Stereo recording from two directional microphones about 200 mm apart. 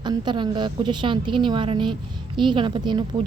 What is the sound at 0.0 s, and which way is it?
A woman's voice, 20° right (ahead or behind).